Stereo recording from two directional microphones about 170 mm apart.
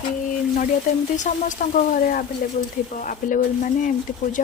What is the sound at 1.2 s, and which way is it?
Speech, 50° left (ahead or behind).